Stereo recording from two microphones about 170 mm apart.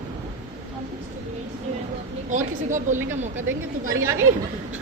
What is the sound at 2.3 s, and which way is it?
Speech, 45° right (ahead or behind).